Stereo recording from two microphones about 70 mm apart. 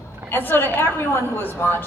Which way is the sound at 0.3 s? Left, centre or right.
Left.